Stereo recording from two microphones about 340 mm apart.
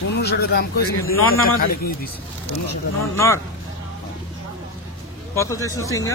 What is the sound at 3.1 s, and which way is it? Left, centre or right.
Speech, centre.